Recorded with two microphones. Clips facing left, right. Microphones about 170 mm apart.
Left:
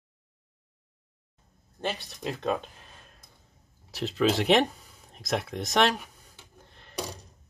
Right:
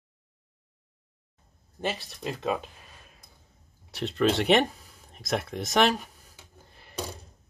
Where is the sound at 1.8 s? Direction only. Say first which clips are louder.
Right 1 dB; 5° right (ahead or behind).